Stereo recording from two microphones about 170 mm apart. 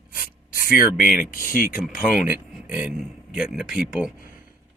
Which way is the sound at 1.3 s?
55° left (ahead or behind).